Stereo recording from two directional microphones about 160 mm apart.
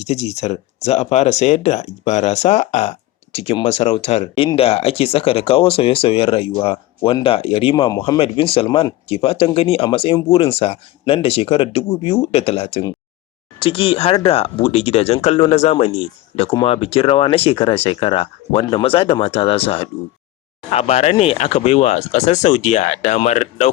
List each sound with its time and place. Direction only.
0.0 s speech: 45° left (ahead or behind); by 8.2 s 25° left (ahead or behind)
8.2 s speech: 35° left (ahead or behind)